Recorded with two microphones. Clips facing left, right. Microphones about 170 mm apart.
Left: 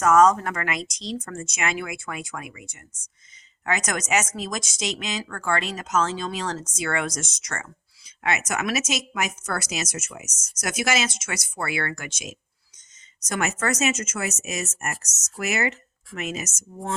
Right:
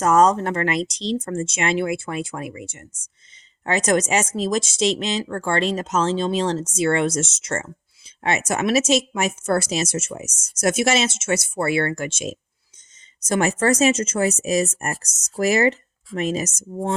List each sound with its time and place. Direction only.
0.0 s speech: 30° right (ahead or behind)